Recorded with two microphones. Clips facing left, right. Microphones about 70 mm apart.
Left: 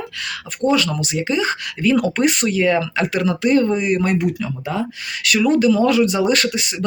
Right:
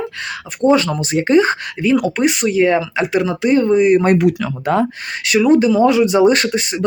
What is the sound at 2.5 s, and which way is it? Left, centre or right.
Speech, right.